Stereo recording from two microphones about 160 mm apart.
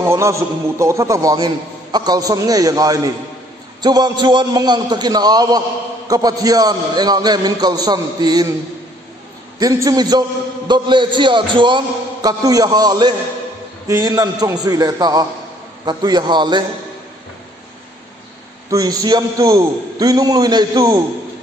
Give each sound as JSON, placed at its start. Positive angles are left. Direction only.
{"t": 0.1, "sound": "a man's voice", "side_deg": -20}
{"t": 9.6, "sound": "a man's voice", "side_deg": -20}
{"t": 18.7, "sound": "a man's voice", "side_deg": -25}